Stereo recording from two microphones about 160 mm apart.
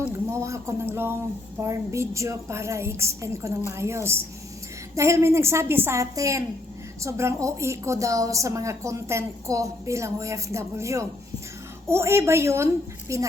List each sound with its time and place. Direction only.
0.3 s a woman's voice: 20° right (ahead or behind)